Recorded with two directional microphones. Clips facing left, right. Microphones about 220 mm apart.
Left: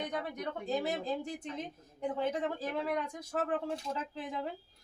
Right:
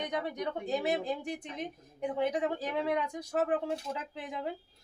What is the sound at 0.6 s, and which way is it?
Speech, 15° right (ahead or behind).